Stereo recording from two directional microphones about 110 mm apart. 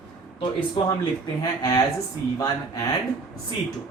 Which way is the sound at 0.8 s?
50° left (ahead or behind).